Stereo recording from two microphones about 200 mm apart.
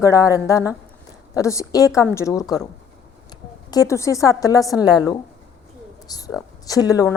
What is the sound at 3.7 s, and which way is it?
A woman's voice, 15° left (ahead or behind).